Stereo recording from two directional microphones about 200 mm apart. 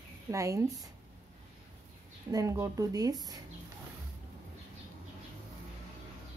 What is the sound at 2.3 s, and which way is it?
Speech, 15° right (ahead or behind).